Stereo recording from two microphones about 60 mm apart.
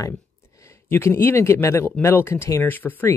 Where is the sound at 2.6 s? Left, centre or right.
Left.